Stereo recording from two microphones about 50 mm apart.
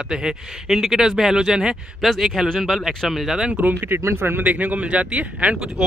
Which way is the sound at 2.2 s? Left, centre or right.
Centre.